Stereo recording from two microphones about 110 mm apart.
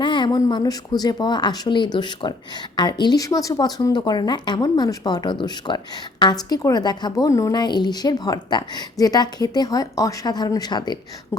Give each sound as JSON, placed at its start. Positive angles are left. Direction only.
{"t": 0.0, "sound": "speech", "side_deg": 45}